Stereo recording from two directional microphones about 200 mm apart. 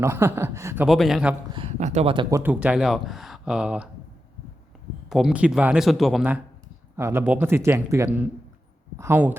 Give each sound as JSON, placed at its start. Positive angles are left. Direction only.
{"t": 0.0, "sound": "a man's voice", "side_deg": -10}
{"t": 0.9, "sound": "speech", "side_deg": 0}
{"t": 1.5, "sound": "speech", "side_deg": -35}
{"t": 2.3, "sound": "speech", "side_deg": -10}
{"t": 5.0, "sound": "a man's voice", "side_deg": 0}